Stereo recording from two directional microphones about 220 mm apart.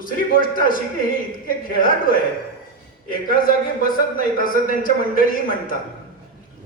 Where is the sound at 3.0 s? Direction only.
40° left (ahead or behind).